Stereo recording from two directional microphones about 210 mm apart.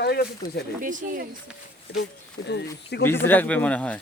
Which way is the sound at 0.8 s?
40° right (ahead or behind).